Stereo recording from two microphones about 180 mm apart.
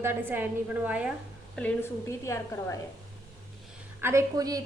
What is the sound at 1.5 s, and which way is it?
A woman's voice, 10° left (ahead or behind).